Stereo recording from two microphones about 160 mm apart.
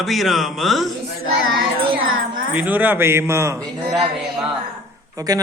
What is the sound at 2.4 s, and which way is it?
A man's voice, 10° right (ahead or behind).